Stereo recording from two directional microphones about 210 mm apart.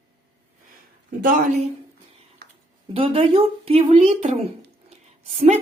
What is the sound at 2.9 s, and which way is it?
A woman's voice, 25° right (ahead or behind).